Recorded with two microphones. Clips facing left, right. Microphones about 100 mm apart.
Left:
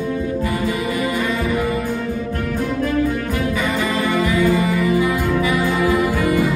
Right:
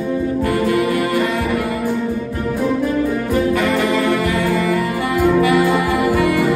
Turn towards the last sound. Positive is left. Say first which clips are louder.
# right 2 dB
turn(degrees=-65)  # may be behind; listen again after turning